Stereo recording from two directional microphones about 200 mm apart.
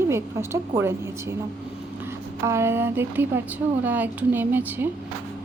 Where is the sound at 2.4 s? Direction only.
15° right (ahead or behind).